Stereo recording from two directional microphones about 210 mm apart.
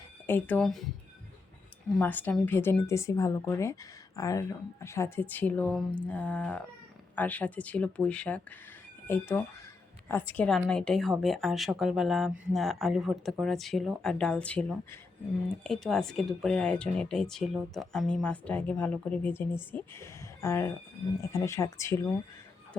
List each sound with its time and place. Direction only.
0.3 s speech: 10° left (ahead or behind)
2.0 s speech: 10° left (ahead or behind)